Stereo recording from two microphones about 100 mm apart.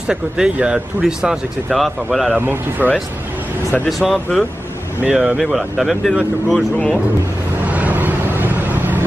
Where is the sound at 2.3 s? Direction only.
20° right (ahead or behind).